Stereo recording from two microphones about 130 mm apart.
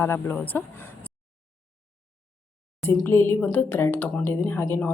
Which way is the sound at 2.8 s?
20° left (ahead or behind).